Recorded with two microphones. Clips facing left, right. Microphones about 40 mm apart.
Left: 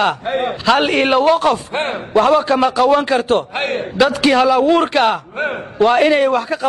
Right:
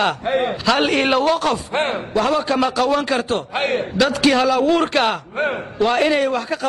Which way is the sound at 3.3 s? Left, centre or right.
Left.